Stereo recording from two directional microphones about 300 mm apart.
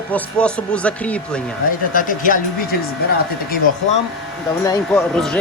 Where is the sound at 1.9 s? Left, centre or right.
Left.